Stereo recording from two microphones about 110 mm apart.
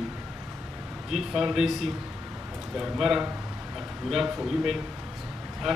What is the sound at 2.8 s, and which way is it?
Speech, 5° right (ahead or behind).